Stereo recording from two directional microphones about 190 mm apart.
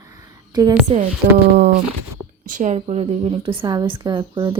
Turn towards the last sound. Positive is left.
turn(degrees=-20)  # may be behind; listen again after turning